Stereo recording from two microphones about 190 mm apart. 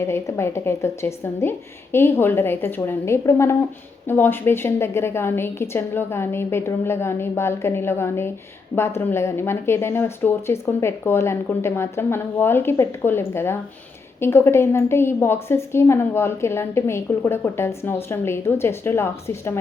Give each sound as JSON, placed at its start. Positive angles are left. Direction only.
{"t": 0.0, "sound": "a woman's voice", "side_deg": 15}